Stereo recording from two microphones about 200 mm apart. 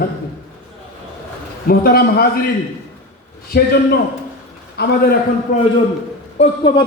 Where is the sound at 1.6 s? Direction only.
50° left (ahead or behind).